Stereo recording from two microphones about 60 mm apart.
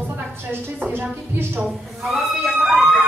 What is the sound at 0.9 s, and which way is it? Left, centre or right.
Speech, right.